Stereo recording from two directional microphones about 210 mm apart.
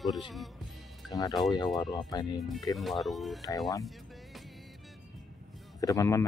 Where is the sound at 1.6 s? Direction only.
Centre (ahead or behind).